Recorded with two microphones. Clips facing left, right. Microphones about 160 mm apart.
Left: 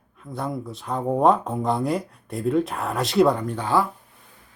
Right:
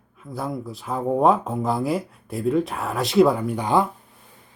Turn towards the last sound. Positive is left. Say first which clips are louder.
# right 2 dB
turn(degrees=-15)  # may be behind; listen again after turning